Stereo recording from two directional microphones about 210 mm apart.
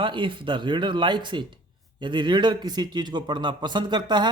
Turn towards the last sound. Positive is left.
turn(degrees=-20)  # may be behind; listen again after turning